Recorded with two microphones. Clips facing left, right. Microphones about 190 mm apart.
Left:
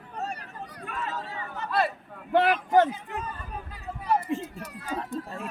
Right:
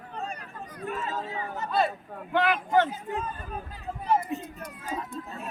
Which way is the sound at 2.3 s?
40° left (ahead or behind).